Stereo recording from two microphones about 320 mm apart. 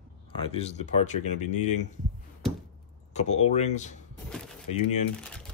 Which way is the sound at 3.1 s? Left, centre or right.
Left.